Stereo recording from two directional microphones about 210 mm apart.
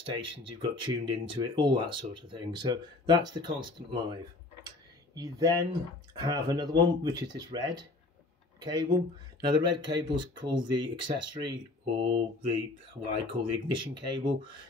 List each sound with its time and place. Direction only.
0.0 s speech: 25° right (ahead or behind)
4.6 s a sound: 15° right (ahead or behind)
6.1 s speech: 20° right (ahead or behind)